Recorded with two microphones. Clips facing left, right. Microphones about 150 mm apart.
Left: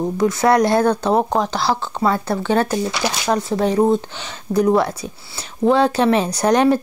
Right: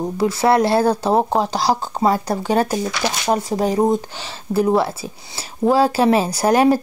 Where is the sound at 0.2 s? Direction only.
30° right (ahead or behind).